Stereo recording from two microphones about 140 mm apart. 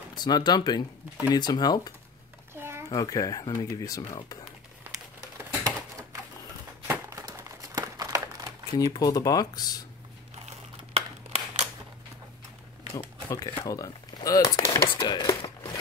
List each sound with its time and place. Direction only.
0.1 s speech: 30° left (ahead or behind)
2.5 s a sound: 15° right (ahead or behind)
2.9 s speech: 25° left (ahead or behind)
6.9 s crumpling: 20° right (ahead or behind)
8.7 s speech: 25° left (ahead or behind)
10.9 s a sound: 45° right (ahead or behind)
12.9 s speech: 25° left (ahead or behind)